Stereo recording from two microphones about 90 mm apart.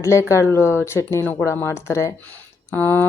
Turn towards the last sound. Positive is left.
turn(degrees=20)  # may be behind; listen again after turning